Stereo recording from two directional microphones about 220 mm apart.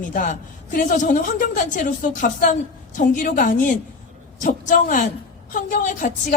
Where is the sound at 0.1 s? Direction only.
40° left (ahead or behind).